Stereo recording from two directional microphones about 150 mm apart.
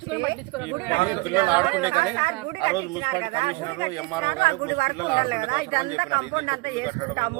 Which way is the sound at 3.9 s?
25° left (ahead or behind).